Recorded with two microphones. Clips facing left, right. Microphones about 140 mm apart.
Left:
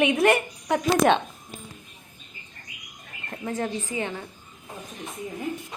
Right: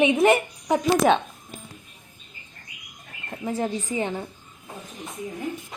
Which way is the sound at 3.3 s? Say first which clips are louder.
Right 2 dB; 10° right (ahead or behind).